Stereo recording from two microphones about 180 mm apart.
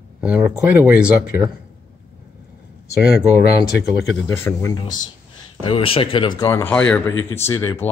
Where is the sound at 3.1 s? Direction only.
65° left (ahead or behind).